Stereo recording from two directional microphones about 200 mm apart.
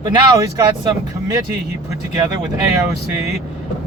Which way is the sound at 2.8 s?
15° right (ahead or behind).